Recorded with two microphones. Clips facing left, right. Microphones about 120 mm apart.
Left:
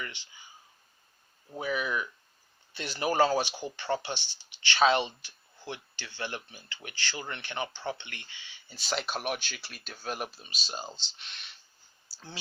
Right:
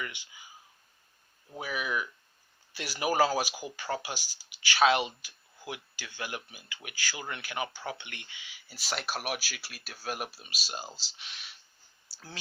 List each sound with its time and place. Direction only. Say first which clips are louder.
0.0 s a sound: right 1 dB; 10° right (ahead or behind)
1.5 s speech: left 2 dB; 5° right (ahead or behind)
8.6 s speech: left 2 dB; 5° right (ahead or behind)